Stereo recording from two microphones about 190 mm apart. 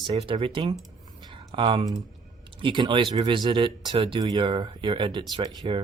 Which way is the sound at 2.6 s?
25° right (ahead or behind).